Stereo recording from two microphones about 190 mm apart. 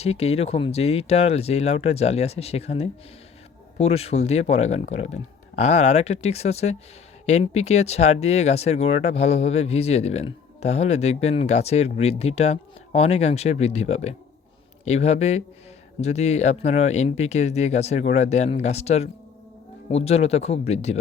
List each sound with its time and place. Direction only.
0.0 s speech: 35° left (ahead or behind)